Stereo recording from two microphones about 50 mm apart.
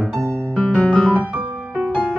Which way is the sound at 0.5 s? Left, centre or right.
Left.